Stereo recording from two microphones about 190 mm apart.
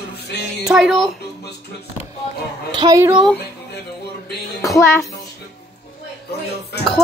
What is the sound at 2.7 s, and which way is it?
Speech, 25° right (ahead or behind).